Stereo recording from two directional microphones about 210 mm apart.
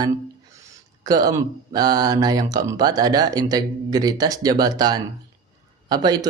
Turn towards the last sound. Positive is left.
turn(degrees=-20)  # may be behind; listen again after turning